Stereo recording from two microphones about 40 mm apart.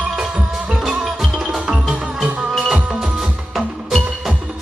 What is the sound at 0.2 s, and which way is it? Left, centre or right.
Music, centre.